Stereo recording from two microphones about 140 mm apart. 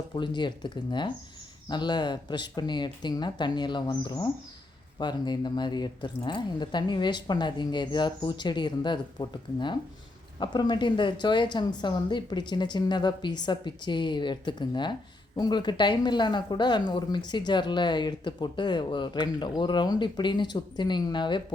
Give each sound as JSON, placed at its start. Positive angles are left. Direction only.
{"t": 0.1, "sound": "speech", "side_deg": 35}